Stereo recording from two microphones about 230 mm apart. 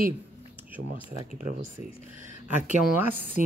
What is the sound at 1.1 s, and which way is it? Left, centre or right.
Speech, right.